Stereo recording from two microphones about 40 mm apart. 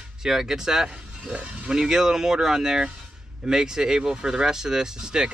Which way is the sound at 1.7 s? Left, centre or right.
Centre.